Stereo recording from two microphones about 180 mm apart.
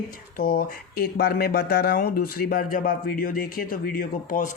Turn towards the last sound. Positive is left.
turn(degrees=50)  # may be behind; listen again after turning